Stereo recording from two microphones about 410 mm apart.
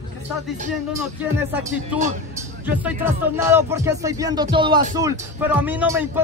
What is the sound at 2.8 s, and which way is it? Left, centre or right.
Music, centre.